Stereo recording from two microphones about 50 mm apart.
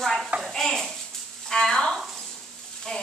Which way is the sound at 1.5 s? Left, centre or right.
Centre.